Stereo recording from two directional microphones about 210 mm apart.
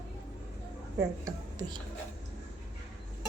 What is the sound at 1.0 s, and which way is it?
Speech, 15° right (ahead or behind).